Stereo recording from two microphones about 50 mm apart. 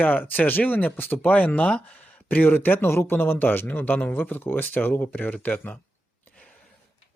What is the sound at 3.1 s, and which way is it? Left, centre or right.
Speech, left.